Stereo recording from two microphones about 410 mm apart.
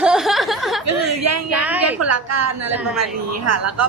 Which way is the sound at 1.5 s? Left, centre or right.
Centre.